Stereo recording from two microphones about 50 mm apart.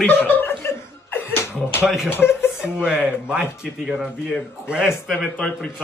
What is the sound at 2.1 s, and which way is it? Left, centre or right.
Speech, left.